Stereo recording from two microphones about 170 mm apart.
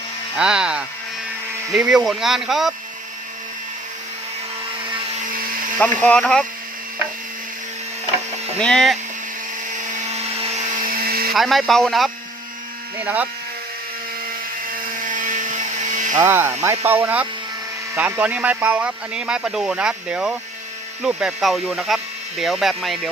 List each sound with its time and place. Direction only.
0.3 s speech: 5° right (ahead or behind)
5.8 s speech: 5° left (ahead or behind)
8.5 s speech: 5° left (ahead or behind)
10.1 s a sound: 40° right (ahead or behind); by 11.3 s 65° right (ahead or behind)
11.3 s speech: centre (ahead or behind)
13.0 s speech: 10° right (ahead or behind)
15.0 s dental drill: 50° right (ahead or behind)
16.1 s speech: 15° right (ahead or behind)